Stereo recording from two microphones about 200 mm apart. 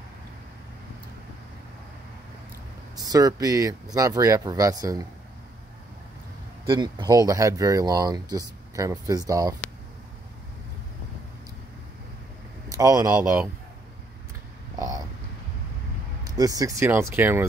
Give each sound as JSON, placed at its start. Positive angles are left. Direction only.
{"t": 3.0, "sound": "speech", "side_deg": -20}
{"t": 6.7, "sound": "speech", "side_deg": -20}
{"t": 12.6, "sound": "speech", "side_deg": -15}
{"t": 14.8, "sound": "a sound", "side_deg": -20}
{"t": 16.3, "sound": "speech", "side_deg": -20}